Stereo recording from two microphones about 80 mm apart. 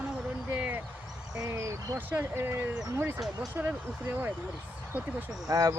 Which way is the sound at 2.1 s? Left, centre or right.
Right.